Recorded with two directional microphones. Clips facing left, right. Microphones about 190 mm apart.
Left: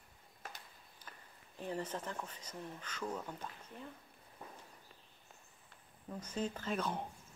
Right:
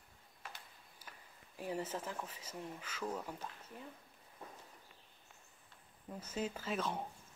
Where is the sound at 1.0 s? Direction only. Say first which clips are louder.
Left 1 dB; 10° right (ahead or behind).